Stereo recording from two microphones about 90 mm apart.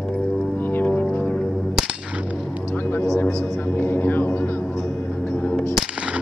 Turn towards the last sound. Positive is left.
turn(degrees=-10)  # may be behind; listen again after turning